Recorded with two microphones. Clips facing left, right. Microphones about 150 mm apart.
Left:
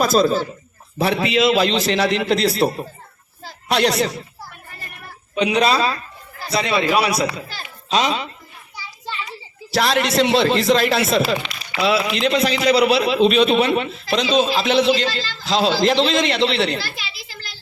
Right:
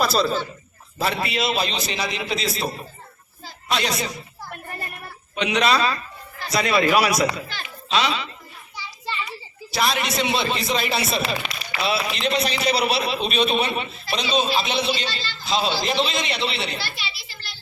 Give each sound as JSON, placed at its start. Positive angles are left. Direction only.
{"t": 0.0, "sound": "speech", "side_deg": 45}
{"t": 0.9, "sound": "a man's voice", "side_deg": 70}
{"t": 5.4, "sound": "speech", "side_deg": 30}
{"t": 7.4, "sound": "a child's voice", "side_deg": 40}
{"t": 9.7, "sound": "a man's voice", "side_deg": 90}